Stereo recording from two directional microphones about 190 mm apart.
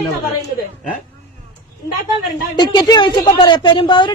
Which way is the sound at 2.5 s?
20° left (ahead or behind).